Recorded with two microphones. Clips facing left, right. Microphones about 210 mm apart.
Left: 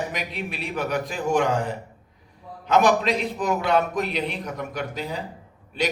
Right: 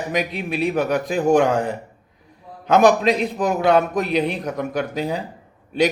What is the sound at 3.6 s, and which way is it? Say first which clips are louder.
Speech: right 7 dB; 45° right (ahead or behind).